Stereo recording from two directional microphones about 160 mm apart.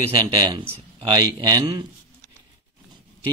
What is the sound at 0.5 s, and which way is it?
Speech, 25° right (ahead or behind).